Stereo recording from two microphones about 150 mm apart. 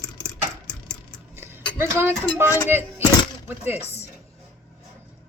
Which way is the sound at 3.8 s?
45° left (ahead or behind).